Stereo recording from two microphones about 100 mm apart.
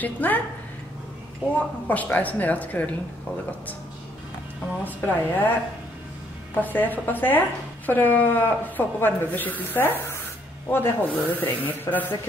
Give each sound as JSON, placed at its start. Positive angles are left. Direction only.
{"t": 0.0, "sound": "speech", "side_deg": 15}
{"t": 1.9, "sound": "speech", "side_deg": 15}
{"t": 4.8, "sound": "a woman's voice", "side_deg": 20}
{"t": 6.6, "sound": "a woman's voice", "side_deg": 20}